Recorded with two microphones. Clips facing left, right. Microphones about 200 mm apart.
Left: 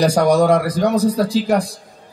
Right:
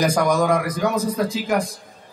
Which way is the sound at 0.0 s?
35° left (ahead or behind).